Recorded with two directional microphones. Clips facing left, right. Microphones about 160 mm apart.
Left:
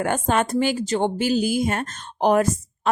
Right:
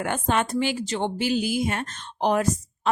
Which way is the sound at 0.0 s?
45° left (ahead or behind).